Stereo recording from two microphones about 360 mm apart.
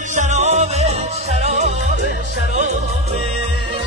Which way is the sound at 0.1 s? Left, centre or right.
Centre.